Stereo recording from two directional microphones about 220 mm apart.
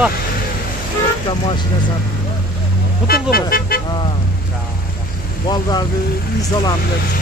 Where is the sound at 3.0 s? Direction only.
45° left (ahead or behind).